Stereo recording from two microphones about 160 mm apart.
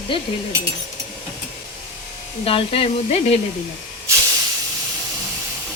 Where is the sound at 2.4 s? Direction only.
35° left (ahead or behind).